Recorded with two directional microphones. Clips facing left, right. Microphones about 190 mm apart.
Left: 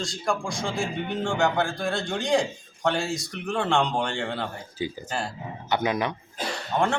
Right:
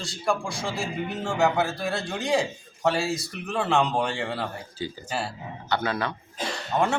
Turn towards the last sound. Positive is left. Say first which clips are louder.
# even
turn(degrees=-5)  # may be behind; listen again after turning